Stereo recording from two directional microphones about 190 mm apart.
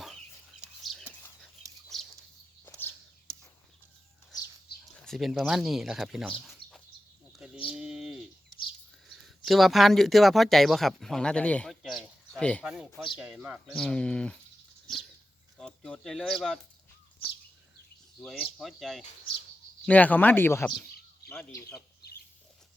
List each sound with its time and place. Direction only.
0.6 s a sound: centre (ahead or behind)
1.9 s bird: centre (ahead or behind)
4.9 s speech: centre (ahead or behind)
7.3 s bird: 5° right (ahead or behind)
9.0 s speech: centre (ahead or behind)
15.5 s speech: 5° left (ahead or behind)
18.2 s speech: centre (ahead or behind)